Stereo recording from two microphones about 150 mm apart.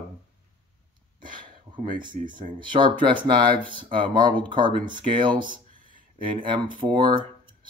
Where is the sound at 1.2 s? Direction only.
30° right (ahead or behind).